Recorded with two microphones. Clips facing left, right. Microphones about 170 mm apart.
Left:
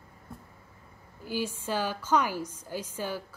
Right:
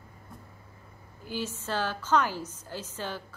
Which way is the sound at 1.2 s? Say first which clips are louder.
Left 2 dB; 10° left (ahead or behind).